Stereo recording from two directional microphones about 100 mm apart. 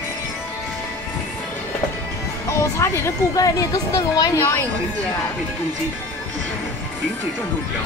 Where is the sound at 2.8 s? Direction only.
35° left (ahead or behind).